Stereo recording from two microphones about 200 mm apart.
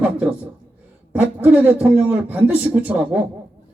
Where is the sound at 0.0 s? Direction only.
5° right (ahead or behind).